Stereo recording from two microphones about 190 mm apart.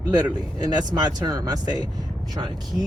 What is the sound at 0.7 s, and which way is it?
Speech, 20° right (ahead or behind).